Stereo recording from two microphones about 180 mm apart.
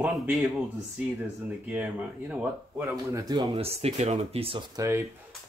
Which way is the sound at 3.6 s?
35° right (ahead or behind).